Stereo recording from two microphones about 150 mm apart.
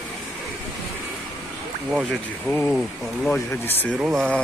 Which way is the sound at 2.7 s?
Centre (ahead or behind).